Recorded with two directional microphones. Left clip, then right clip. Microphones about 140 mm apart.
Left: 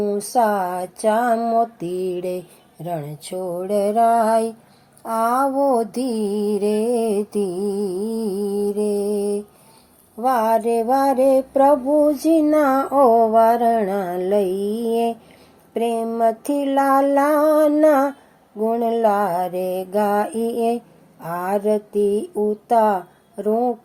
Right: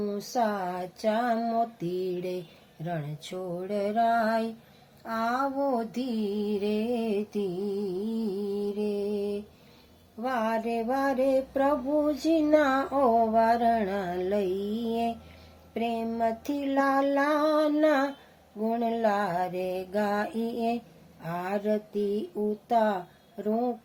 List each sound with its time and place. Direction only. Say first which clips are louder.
0.3 s mantra: left 10 dB; 20° left (ahead or behind)
1.0 s female singing: left 9 dB; 15° left (ahead or behind)
2.8 s mantra: left 8 dB; 20° left (ahead or behind)
12.2 s female singing: left 7 dB; 10° left (ahead or behind)
14.5 s mantra: left 9 dB; 50° left (ahead or behind)
15.7 s female singing: left 9 dB; 15° left (ahead or behind)